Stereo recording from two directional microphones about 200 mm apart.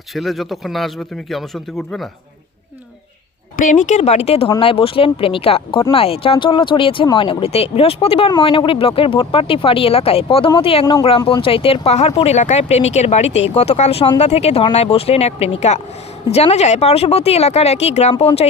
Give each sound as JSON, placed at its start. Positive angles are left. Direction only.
{"t": 0.1, "sound": "a man's voice", "side_deg": 0}
{"t": 3.6, "sound": "speech", "side_deg": 40}